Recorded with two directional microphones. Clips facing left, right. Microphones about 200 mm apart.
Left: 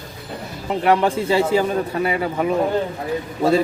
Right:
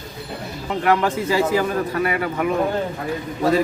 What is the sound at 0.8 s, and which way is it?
A man's voice, 25° left (ahead or behind).